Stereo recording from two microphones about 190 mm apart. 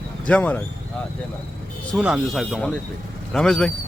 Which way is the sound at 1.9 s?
Centre (ahead or behind).